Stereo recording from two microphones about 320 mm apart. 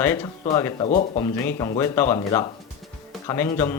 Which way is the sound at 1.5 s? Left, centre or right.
Centre.